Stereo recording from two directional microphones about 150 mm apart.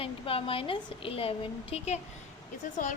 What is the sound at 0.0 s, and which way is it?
A woman's voice, 40° left (ahead or behind).